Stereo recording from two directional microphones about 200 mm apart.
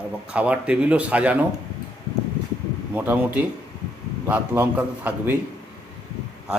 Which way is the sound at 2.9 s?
10° right (ahead or behind).